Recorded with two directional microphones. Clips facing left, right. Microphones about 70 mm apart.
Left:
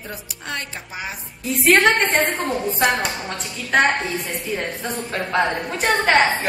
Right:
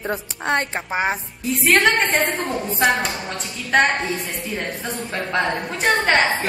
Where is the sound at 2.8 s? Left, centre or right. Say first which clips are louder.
Right 1 dB; centre.